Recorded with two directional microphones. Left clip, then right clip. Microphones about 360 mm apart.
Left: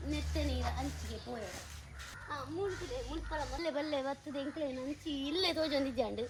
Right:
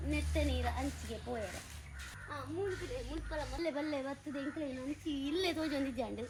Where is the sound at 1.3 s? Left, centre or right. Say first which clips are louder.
Right 3 dB; centre.